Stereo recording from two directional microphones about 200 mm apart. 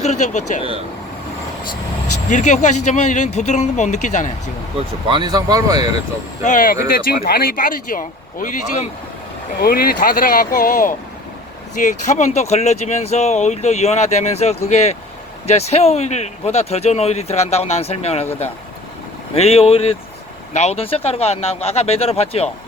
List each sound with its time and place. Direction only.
0.0 s speech: 35° left (ahead or behind)
0.6 s speech: 30° right (ahead or behind)
2.3 s speech: 35° left (ahead or behind)
5.0 s speech: 20° right (ahead or behind)
6.4 s a man's voice: 40° left (ahead or behind)
19.3 s speech: 30° left (ahead or behind)